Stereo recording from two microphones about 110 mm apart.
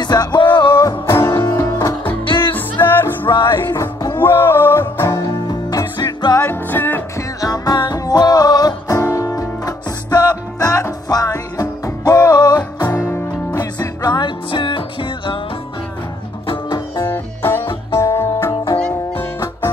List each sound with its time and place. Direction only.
0.0 s music: 40° left (ahead or behind)
0.7 s music: 30° left (ahead or behind)
2.2 s music: 45° left (ahead or behind)
2.9 s music: 20° left (ahead or behind)
3.3 s music: 45° left (ahead or behind)
3.7 s music: 30° left (ahead or behind)
6.4 s music: 15° left (ahead or behind)
7.3 s music: 35° left (ahead or behind); by 15.4 s 50° left (ahead or behind)
16.4 s music: 40° left (ahead or behind)
17.0 s music: 20° left (ahead or behind)
18.8 s music: 10° left (ahead or behind)